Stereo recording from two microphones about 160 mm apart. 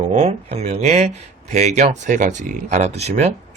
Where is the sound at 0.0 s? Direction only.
40° right (ahead or behind).